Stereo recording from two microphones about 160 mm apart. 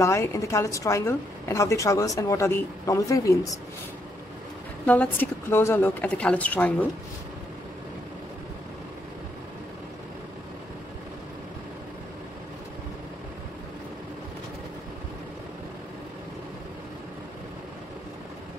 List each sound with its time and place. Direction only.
0.0 s a woman's voice: 20° left (ahead or behind)
4.8 s a woman's voice: 10° left (ahead or behind)